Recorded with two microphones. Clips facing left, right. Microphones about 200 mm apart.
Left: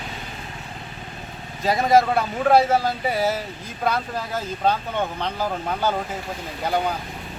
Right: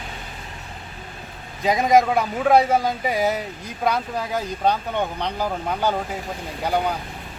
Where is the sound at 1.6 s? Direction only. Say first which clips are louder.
Right 1 dB; 15° right (ahead or behind).